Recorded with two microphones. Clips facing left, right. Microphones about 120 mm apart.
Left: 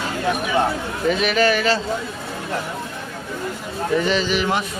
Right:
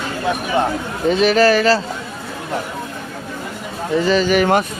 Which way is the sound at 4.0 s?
40° right (ahead or behind).